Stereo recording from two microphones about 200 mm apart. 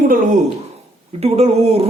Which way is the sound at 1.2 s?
30° right (ahead or behind).